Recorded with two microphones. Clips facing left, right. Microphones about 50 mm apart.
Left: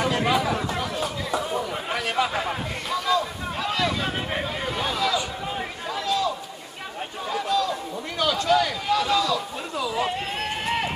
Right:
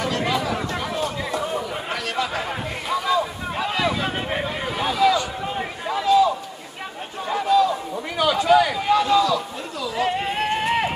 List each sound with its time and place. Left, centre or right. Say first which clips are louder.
0.0 s chatter: left 1 dB; centre
0.4 s chatter: even; centre
2.9 s a sound: right 2 dB; centre